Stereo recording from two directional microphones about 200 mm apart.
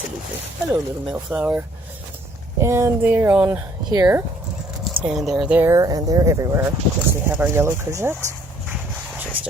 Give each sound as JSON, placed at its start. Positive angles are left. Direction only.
{"t": 0.7, "sound": "speech", "side_deg": -5}
{"t": 5.0, "sound": "speech", "side_deg": 0}
{"t": 8.7, "sound": "a sound", "side_deg": -10}